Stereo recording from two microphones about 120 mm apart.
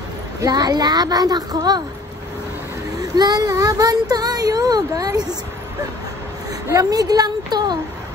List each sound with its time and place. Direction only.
0.4 s speech: 30° right (ahead or behind)
3.0 s speech: 30° right (ahead or behind)
6.7 s speech: 30° right (ahead or behind)